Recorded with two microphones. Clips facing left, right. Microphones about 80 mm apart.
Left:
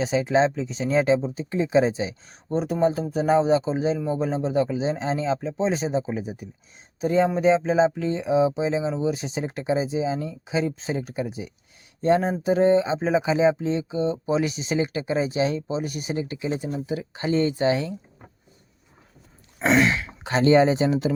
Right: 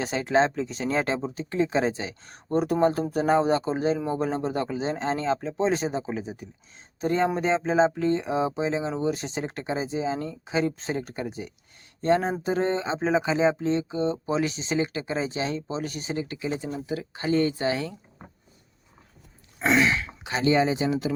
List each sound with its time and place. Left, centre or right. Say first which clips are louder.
0.0 s speech: left 2 dB; centre
3.1 s speech: left 2 dB; centre
16.1 s speech: left 2 dB; left
19.8 s speech: left 2 dB; left
20.2 s speech: left 5 dB; left